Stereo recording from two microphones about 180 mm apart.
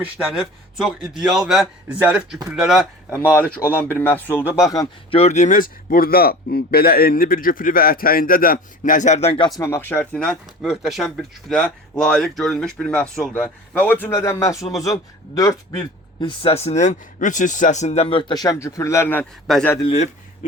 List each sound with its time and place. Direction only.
0.0 s speech: 5° right (ahead or behind)
3.3 s speech: 10° left (ahead or behind)
5.1 s speech: 40° left (ahead or behind)
9.6 s speech: 15° left (ahead or behind)
16.4 s speech: 35° left (ahead or behind); by 19.2 s 15° left (ahead or behind)
19.5 s speech: 5° left (ahead or behind)
19.9 s a man's voice: 40° left (ahead or behind)